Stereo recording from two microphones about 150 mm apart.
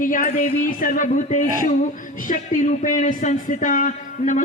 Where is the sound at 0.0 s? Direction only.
60° left (ahead or behind).